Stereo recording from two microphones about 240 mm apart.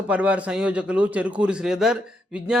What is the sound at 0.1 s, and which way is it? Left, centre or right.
A man's voice, centre.